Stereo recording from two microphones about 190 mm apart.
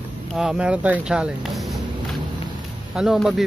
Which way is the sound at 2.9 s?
5° right (ahead or behind).